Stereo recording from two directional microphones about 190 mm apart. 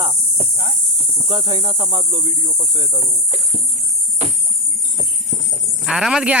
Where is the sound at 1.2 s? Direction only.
25° right (ahead or behind).